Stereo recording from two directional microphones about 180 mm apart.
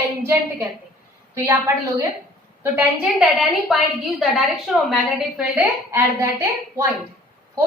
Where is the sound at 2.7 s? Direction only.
Centre (ahead or behind).